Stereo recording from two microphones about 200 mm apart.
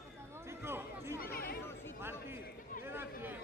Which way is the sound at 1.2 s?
50° left (ahead or behind).